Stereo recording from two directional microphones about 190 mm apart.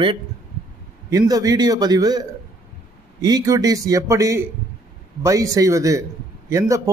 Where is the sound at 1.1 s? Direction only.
20° right (ahead or behind).